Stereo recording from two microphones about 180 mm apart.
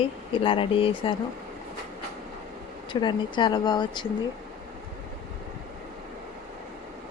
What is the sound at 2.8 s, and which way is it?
Speech, 25° left (ahead or behind).